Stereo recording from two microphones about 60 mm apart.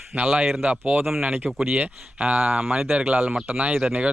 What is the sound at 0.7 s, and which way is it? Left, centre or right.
Speech, right.